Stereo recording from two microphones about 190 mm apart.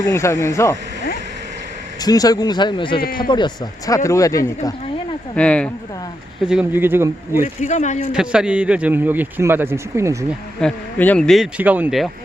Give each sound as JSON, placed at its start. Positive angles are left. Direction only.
{"t": 0.0, "sound": "speech", "side_deg": 15}
{"t": 2.0, "sound": "speech", "side_deg": 20}
{"t": 5.3, "sound": "speech", "side_deg": 5}
{"t": 6.5, "sound": "a man's voice", "side_deg": -10}
{"t": 7.4, "sound": "speech", "side_deg": 40}
{"t": 8.1, "sound": "a man's voice", "side_deg": -5}
{"t": 10.6, "sound": "speech", "side_deg": 5}